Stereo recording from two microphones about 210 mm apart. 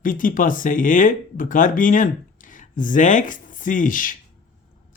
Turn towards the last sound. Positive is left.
turn(degrees=40)  # may be behind; listen again after turning